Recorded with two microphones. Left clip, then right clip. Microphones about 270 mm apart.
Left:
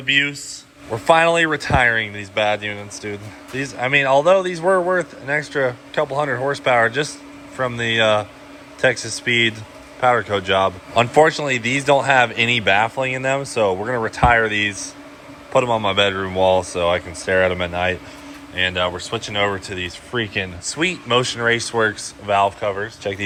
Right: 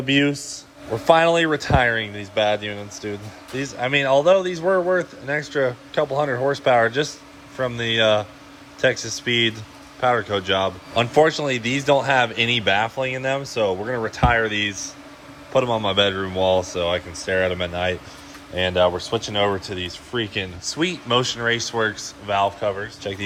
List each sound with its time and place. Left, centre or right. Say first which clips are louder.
0.0 s a man's voice: left 2 dB; right